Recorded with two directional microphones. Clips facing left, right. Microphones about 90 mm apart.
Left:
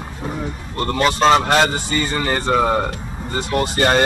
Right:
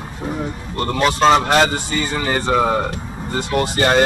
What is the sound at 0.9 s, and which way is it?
Speech, centre (ahead or behind).